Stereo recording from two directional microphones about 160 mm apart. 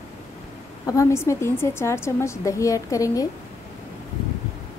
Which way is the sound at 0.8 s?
20° left (ahead or behind).